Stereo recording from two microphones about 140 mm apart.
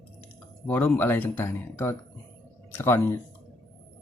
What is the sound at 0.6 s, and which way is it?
Speech, 10° left (ahead or behind).